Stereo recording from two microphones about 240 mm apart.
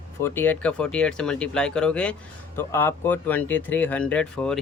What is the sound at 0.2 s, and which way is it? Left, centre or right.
Speech, centre.